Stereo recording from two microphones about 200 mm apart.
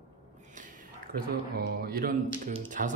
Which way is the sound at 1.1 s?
50° right (ahead or behind).